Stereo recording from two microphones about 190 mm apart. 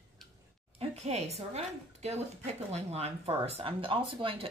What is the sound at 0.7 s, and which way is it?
A woman's voice, 35° right (ahead or behind).